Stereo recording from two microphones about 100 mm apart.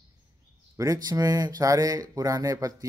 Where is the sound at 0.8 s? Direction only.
35° right (ahead or behind).